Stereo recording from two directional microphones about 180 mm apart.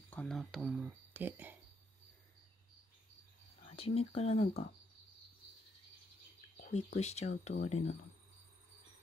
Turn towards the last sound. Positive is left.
turn(degrees=40)  # may be behind; listen again after turning